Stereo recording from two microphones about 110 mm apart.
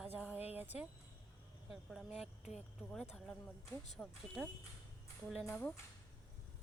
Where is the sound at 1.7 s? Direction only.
Centre (ahead or behind).